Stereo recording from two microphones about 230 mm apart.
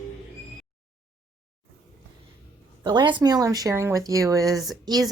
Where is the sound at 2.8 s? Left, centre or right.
Centre.